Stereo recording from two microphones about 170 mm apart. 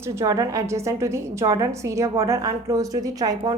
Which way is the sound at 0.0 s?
15° right (ahead or behind).